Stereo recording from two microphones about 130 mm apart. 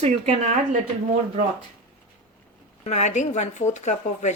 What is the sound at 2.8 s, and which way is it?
Speech, 60° left (ahead or behind).